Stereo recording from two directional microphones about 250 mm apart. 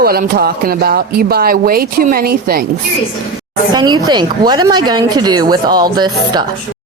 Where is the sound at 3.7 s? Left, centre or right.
Centre.